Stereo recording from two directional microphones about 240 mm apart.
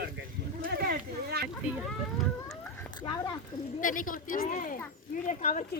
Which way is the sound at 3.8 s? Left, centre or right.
Left.